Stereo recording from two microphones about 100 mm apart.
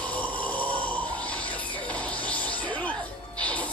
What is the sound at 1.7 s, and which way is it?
Music, 15° left (ahead or behind).